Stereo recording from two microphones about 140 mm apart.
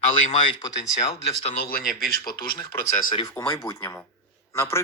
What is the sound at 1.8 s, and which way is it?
Speech, 90° left.